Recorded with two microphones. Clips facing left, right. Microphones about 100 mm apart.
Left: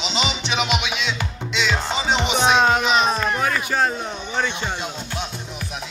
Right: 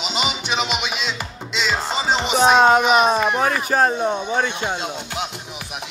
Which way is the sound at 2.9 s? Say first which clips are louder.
Right 3 dB; 15° right (ahead or behind).